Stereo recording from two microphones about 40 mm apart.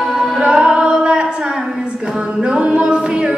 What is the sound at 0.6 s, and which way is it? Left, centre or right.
Singing, centre.